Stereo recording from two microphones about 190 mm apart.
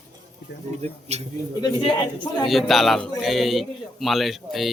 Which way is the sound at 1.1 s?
35° right (ahead or behind).